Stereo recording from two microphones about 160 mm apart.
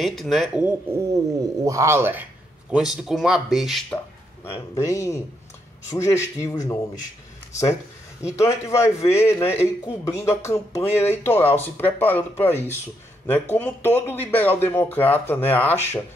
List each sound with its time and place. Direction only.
0.0 s speech: centre (ahead or behind)
0.9 s speech: 20° right (ahead or behind)
2.7 s speech: 5° right (ahead or behind)
4.5 s speech: 15° left (ahead or behind)
8.6 s speech: 15° left (ahead or behind)